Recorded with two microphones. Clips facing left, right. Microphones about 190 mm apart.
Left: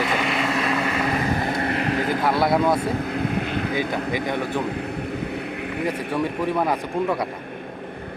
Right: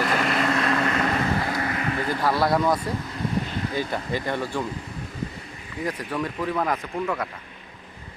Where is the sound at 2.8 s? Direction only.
60° left (ahead or behind).